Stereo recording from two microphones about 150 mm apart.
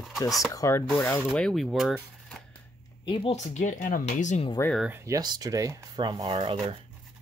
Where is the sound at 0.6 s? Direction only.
20° left (ahead or behind).